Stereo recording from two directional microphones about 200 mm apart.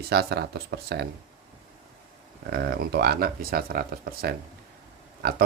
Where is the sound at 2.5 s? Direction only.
55° right (ahead or behind).